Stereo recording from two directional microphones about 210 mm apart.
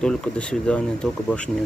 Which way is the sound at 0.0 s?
5° left (ahead or behind).